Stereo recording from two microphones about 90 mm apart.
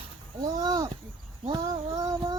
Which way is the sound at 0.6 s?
50° right (ahead or behind).